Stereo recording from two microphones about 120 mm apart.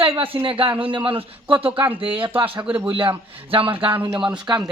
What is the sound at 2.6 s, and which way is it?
Speech, 10° right (ahead or behind).